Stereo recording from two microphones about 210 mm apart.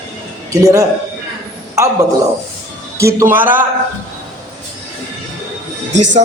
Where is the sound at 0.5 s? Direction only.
15° right (ahead or behind).